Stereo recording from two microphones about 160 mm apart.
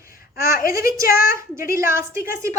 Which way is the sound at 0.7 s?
20° right (ahead or behind).